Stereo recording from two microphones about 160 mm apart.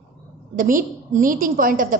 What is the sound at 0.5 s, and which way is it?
A woman's voice, 55° right (ahead or behind).